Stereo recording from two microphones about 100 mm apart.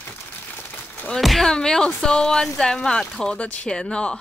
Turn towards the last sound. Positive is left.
turn(degrees=10)  # may be behind; listen again after turning